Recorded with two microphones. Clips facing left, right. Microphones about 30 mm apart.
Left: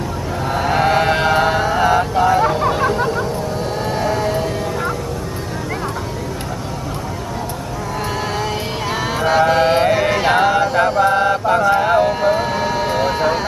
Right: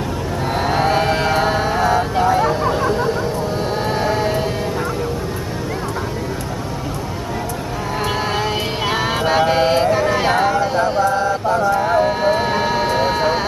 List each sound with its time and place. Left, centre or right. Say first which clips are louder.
0.7 s a sound: left 2 dB; centre
1.1 s music: left 2 dB; centre
2.2 s hubbub: left 1 dB; centre
3.8 s sheep: even; centre
8.4 s music: right 2 dB; centre
10.8 s mantra: left 2 dB; left
11.7 s a sound: left 2 dB; left
12.1 s vehicle: even; centre